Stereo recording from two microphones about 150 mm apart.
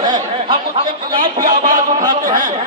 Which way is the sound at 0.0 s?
30° right (ahead or behind).